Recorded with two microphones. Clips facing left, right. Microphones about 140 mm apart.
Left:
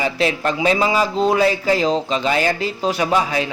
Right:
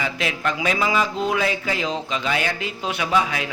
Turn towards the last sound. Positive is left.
turn(degrees=35)  # may be behind; listen again after turning